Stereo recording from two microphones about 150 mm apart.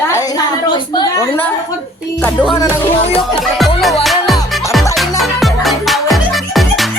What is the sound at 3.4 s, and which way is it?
Music, centre (ahead or behind).